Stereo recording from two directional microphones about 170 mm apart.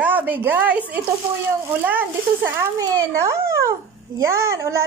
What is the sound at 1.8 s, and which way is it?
A woman's voice, 10° right (ahead or behind).